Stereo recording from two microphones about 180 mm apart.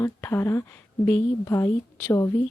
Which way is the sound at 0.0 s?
15° left (ahead or behind).